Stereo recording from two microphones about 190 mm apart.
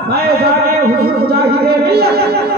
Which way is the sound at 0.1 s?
55° right (ahead or behind).